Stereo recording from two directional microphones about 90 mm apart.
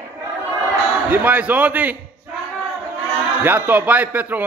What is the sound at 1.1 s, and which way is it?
Speech, 20° right (ahead or behind).